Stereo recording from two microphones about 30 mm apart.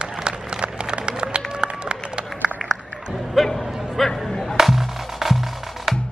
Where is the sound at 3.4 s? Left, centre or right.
Centre.